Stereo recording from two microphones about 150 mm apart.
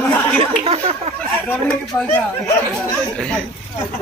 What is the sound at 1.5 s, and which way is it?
Speech, 5° left (ahead or behind).